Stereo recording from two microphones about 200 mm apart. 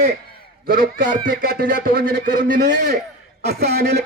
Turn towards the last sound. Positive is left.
turn(degrees=-55)  # may be behind; listen again after turning